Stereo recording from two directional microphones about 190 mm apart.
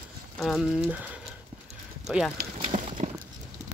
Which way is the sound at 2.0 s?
Centre (ahead or behind).